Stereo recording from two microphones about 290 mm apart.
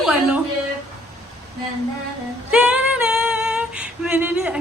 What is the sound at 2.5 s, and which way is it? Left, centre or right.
Female singing, centre.